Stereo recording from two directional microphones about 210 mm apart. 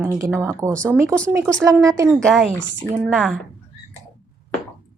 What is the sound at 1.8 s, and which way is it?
Speech, 15° right (ahead or behind).